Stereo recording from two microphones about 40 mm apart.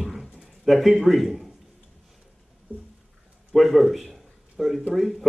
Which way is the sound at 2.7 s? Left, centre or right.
Right.